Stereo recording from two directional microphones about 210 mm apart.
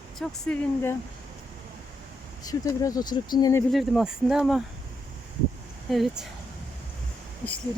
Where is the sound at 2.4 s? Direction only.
15° left (ahead or behind).